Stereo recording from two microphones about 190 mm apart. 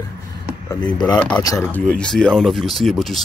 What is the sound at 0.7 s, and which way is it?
Speech, 20° left (ahead or behind).